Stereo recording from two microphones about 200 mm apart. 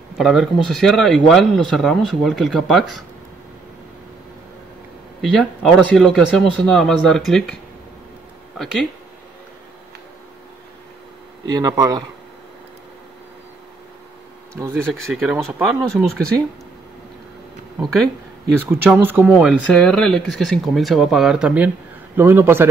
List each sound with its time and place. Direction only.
0.2 s speech: centre (ahead or behind)
5.2 s speech: 5° left (ahead or behind)
11.4 s speech: 20° right (ahead or behind)
14.5 s speech: 15° right (ahead or behind)
18.6 s speech: 10° right (ahead or behind)
19.7 s speech: 5° left (ahead or behind)